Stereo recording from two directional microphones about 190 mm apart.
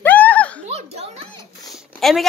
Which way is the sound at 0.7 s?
35° right (ahead or behind).